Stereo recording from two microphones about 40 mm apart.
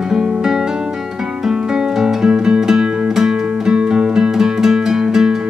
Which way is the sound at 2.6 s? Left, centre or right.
Centre.